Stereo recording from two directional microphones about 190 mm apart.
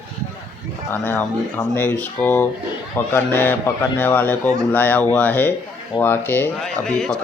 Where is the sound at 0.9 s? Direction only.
10° left (ahead or behind).